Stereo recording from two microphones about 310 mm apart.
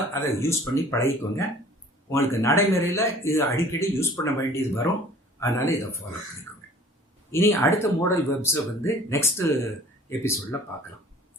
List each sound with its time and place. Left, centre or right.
0.1 s speech: centre
7.3 s speech: centre